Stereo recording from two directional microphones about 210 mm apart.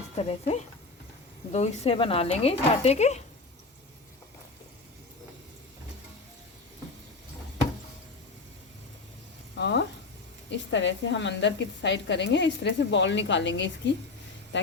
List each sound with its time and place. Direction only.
0.2 s speech: 30° left (ahead or behind)
9.6 s a sound: 55° left (ahead or behind)
10.5 s speech: 60° left (ahead or behind)